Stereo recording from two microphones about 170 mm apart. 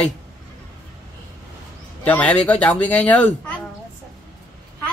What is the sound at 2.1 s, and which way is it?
Speech, 10° left (ahead or behind).